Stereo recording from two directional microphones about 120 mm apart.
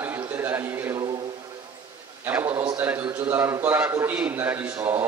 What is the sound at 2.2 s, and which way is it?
A man's voice, 20° right (ahead or behind).